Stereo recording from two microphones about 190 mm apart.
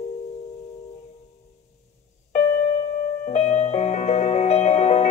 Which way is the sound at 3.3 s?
35° left (ahead or behind).